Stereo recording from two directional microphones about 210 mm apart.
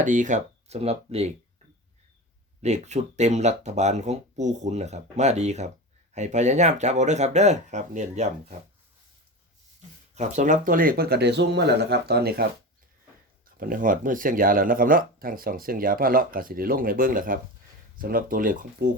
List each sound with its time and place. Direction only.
0.0 s speech: 35° right (ahead or behind)
2.6 s speech: 35° right (ahead or behind)
10.2 s speech: 35° right (ahead or behind)
13.6 s speech: 40° right (ahead or behind)